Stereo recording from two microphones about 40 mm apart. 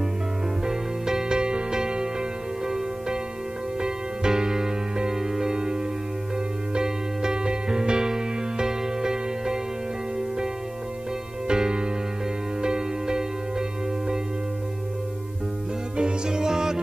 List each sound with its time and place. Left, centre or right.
0.7 s music: centre
3.8 s music: centre
11.4 s music: centre
16.0 s music: centre